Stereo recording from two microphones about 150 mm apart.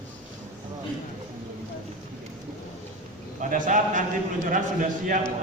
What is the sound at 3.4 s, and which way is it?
A man's voice, 60° right (ahead or behind).